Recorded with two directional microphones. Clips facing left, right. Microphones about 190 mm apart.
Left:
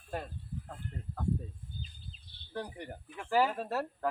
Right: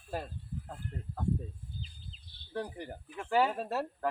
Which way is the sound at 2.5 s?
Centre (ahead or behind).